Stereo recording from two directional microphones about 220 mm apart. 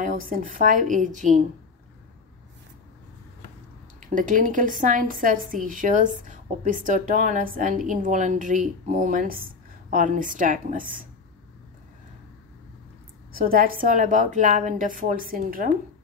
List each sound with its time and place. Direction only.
0.0 s a woman's voice: 35° right (ahead or behind)
4.0 s a woman's voice: 35° right (ahead or behind)
13.3 s a woman's voice: 40° right (ahead or behind)